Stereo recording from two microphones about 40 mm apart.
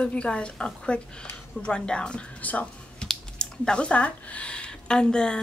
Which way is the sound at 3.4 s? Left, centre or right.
Left.